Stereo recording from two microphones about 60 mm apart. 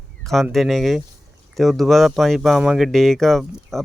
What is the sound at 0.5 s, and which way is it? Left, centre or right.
Speech, centre.